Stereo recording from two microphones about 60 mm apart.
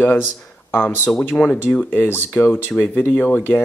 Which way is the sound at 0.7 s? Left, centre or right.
Left.